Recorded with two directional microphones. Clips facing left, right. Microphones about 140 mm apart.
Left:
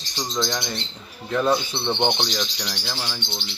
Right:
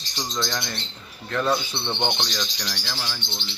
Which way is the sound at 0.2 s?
10° left (ahead or behind).